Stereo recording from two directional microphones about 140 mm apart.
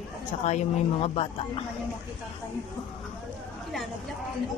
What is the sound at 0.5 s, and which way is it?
Speech, 50° left (ahead or behind).